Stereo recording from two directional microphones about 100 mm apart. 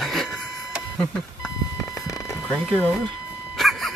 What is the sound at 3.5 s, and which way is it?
Dog, centre (ahead or behind).